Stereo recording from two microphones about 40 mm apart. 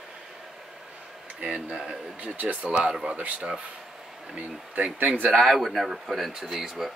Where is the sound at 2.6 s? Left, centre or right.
Right.